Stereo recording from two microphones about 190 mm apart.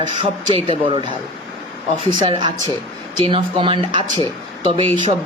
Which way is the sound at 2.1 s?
25° right (ahead or behind).